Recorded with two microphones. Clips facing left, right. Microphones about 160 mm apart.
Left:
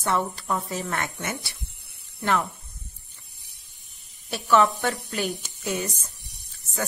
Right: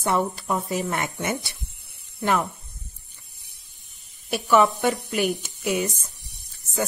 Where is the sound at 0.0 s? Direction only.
15° right (ahead or behind).